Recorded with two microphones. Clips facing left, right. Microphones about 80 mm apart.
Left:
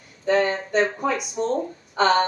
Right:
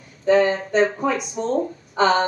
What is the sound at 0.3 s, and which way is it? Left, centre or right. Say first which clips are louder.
Speech: right 4 dB; centre.